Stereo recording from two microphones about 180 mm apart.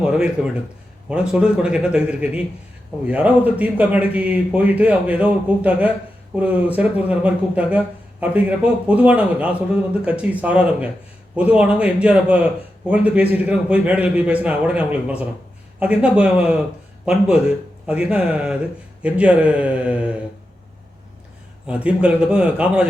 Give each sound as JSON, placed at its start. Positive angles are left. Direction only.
{"t": 0.0, "sound": "a man's voice", "side_deg": -5}
{"t": 21.7, "sound": "a man's voice", "side_deg": -5}